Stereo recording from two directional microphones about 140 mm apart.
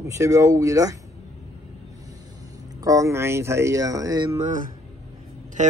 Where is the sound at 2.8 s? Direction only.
25° right (ahead or behind).